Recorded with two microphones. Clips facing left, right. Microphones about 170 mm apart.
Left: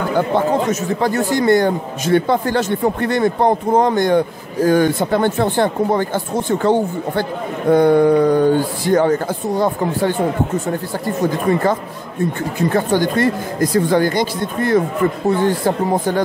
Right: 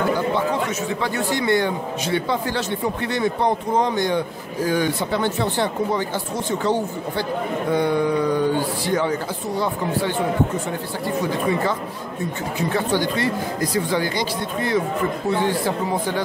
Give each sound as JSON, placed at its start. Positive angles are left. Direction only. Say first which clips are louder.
{"t": 0.4, "sound": "a man's voice", "louder": "left 6 dB", "side_deg": 45}
{"t": 12.5, "sound": "a man's voice", "louder": "left 5 dB", "side_deg": 50}